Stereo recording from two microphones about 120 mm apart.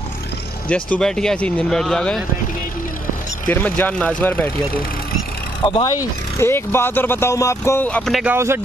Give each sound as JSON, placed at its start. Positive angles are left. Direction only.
{"t": 0.7, "sound": "speech", "side_deg": 10}
{"t": 3.4, "sound": "speech", "side_deg": 15}
{"t": 5.6, "sound": "speech", "side_deg": 40}
{"t": 5.9, "sound": "speech", "side_deg": 25}
{"t": 7.9, "sound": "speech", "side_deg": 5}